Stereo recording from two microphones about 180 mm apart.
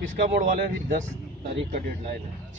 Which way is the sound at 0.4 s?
45° right (ahead or behind).